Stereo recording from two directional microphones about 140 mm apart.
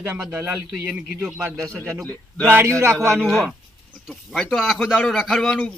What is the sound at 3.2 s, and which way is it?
A man's voice, centre (ahead or behind).